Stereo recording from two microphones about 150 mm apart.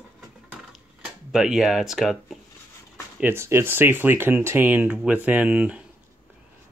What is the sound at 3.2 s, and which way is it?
Speech, 15° right (ahead or behind).